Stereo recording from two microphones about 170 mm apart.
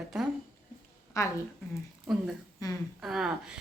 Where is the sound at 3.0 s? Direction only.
Centre (ahead or behind).